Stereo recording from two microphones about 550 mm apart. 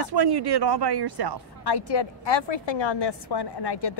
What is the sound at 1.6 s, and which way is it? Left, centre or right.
A woman's voice, left.